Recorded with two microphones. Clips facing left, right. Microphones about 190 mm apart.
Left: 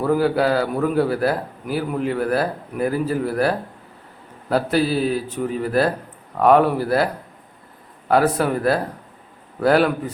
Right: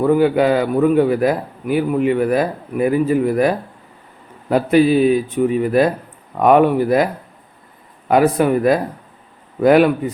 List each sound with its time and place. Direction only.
0.1 s a man's voice: 10° right (ahead or behind)